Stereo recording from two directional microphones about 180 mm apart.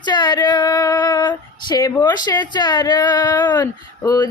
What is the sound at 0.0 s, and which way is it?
Female singing, 25° left (ahead or behind).